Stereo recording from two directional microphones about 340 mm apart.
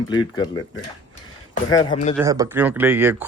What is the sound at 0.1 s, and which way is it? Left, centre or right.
Speech, centre.